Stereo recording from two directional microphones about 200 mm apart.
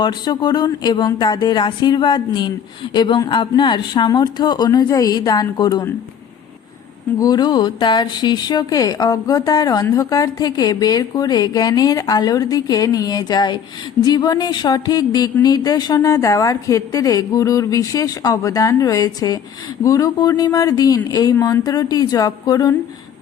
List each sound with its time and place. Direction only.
0.0 s speech: 20° left (ahead or behind)
7.2 s a woman's voice: 20° left (ahead or behind)